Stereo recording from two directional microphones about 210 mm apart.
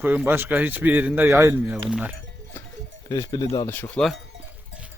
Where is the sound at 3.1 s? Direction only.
20° left (ahead or behind); by 4.2 s centre (ahead or behind).